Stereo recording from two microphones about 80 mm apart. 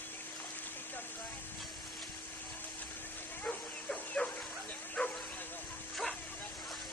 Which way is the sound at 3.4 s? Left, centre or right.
Centre.